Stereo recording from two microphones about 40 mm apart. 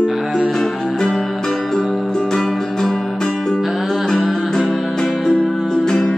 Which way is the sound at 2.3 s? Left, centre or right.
Centre.